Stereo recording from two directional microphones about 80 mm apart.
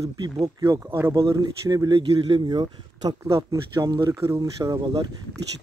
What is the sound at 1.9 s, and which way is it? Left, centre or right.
Speech, right.